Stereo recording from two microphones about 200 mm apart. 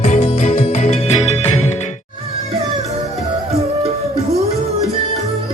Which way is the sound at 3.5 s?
30° right (ahead or behind).